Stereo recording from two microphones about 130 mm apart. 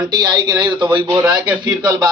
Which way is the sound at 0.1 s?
35° right (ahead or behind).